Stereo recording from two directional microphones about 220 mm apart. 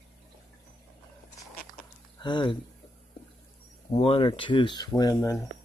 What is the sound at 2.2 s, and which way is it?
Speech, 20° left (ahead or behind).